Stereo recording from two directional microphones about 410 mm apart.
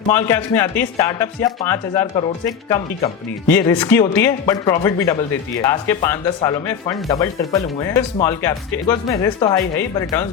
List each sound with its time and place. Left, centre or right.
0.1 s speech: centre